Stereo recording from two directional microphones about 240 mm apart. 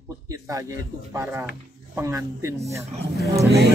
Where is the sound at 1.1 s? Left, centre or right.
Centre.